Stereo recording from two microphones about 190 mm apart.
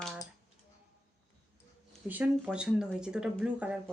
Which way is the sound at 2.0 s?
5° right (ahead or behind).